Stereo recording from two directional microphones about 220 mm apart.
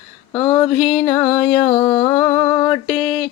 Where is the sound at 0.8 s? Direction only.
5° left (ahead or behind).